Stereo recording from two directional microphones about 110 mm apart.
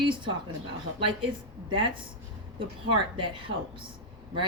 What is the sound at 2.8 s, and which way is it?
Speech, 50° right (ahead or behind).